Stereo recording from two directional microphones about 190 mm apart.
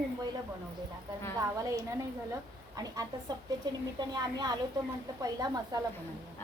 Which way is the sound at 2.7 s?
20° right (ahead or behind).